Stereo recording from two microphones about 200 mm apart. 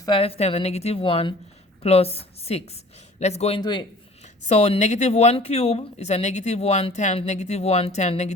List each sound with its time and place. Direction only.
0.0 s speech: 25° left (ahead or behind)